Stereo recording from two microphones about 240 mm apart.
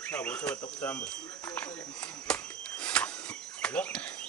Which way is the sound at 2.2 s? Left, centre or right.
Centre.